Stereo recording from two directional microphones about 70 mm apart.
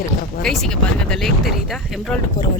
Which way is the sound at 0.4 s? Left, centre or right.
Centre.